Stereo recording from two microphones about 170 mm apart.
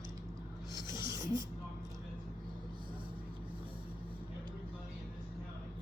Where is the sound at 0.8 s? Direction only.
25° left (ahead or behind).